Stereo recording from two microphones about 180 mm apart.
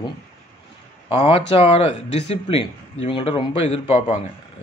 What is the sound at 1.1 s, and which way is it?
Speech, 30° left (ahead or behind).